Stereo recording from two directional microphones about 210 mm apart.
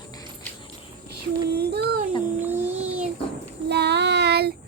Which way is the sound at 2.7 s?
30° right (ahead or behind).